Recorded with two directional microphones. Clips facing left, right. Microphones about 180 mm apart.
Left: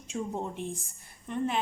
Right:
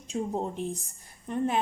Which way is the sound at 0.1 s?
35° right (ahead or behind).